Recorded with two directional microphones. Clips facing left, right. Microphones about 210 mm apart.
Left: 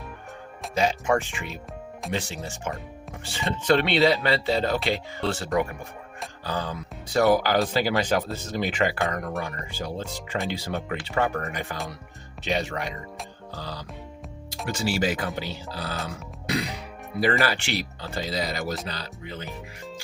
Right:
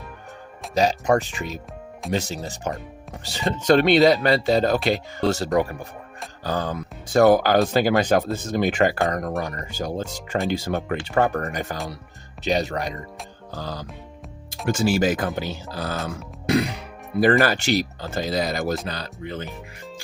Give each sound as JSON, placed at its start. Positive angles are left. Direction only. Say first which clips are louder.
{"t": 0.7, "sound": "speech", "louder": "right 4 dB", "side_deg": -40}
{"t": 16.0, "sound": "music", "louder": "right 7 dB", "side_deg": -50}
{"t": 17.4, "sound": "speech", "louder": "right 6 dB", "side_deg": -45}